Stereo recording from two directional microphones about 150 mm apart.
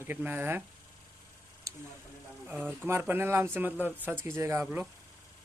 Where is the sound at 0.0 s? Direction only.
15° right (ahead or behind).